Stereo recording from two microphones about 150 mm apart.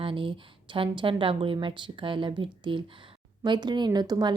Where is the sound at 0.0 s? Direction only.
35° right (ahead or behind).